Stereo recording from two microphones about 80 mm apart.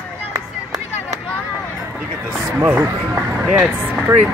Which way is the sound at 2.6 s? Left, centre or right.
Right.